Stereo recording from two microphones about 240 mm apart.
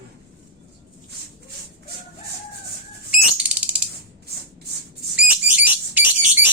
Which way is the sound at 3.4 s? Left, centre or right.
Centre.